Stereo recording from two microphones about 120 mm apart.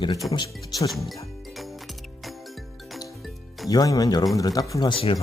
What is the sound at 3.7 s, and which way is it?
Speech, 35° left (ahead or behind).